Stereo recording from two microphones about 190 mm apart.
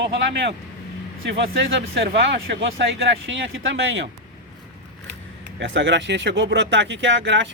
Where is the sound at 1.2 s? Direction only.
70° right (ahead or behind).